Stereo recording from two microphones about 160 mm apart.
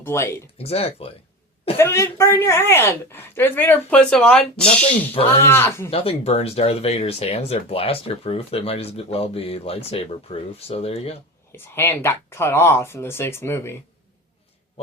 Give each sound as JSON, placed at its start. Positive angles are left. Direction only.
{"t": 0.0, "sound": "speech", "side_deg": 15}
{"t": 0.6, "sound": "speech", "side_deg": 40}
{"t": 1.8, "sound": "speech", "side_deg": 15}
{"t": 5.9, "sound": "speech", "side_deg": 35}
{"t": 11.5, "sound": "speech", "side_deg": 15}